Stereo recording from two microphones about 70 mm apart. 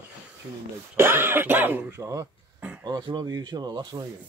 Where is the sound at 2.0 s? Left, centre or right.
Right.